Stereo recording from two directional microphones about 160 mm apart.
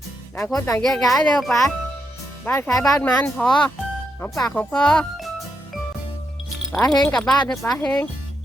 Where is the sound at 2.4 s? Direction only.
15° left (ahead or behind).